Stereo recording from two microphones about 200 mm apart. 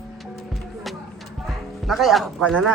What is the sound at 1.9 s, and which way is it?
Speech, centre (ahead or behind).